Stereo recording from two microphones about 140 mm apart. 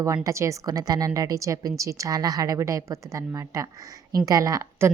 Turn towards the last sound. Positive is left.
turn(degrees=-20)  # may be behind; listen again after turning